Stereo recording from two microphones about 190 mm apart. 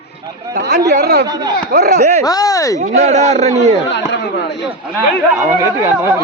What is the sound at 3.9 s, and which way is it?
Speech, 70° left (ahead or behind).